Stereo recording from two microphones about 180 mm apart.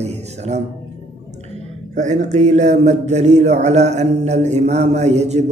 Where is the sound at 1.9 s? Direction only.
40° right (ahead or behind).